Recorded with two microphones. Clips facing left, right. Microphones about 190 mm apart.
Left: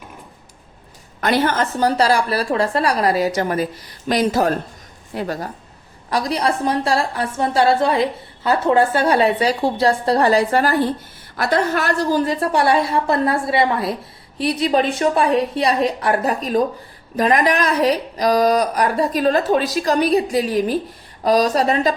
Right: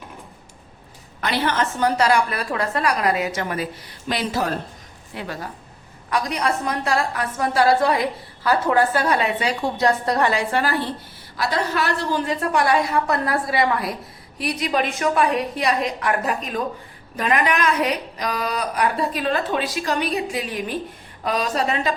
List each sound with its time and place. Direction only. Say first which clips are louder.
1.2 s a woman's voice: left 4 dB; 45° left (ahead or behind)